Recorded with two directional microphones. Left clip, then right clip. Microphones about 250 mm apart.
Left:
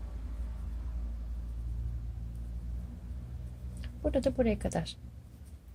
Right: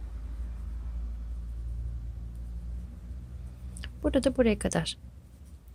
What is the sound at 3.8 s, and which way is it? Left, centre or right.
Speech, right.